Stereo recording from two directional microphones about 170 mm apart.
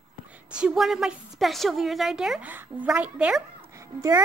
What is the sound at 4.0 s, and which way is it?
Speech, 20° right (ahead or behind).